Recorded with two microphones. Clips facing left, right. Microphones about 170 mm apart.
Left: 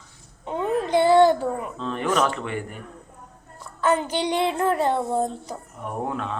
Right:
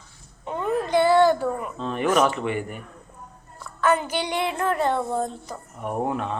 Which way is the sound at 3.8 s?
30° left (ahead or behind).